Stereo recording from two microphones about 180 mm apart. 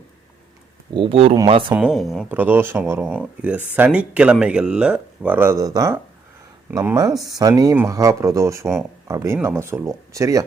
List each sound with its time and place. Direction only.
0.9 s speech: 30° right (ahead or behind)
1.7 s speech: 5° right (ahead or behind)